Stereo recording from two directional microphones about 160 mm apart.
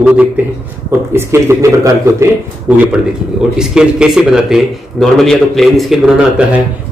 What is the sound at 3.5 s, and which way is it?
A man's voice, 5° right (ahead or behind).